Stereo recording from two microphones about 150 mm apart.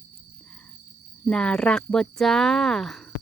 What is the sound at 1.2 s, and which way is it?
Speech, 5° left (ahead or behind).